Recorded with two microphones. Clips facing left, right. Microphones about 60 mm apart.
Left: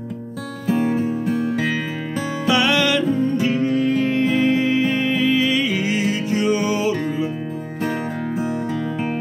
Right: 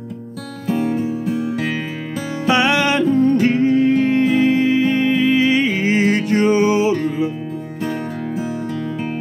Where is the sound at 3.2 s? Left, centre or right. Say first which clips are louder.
Right 5 dB; right.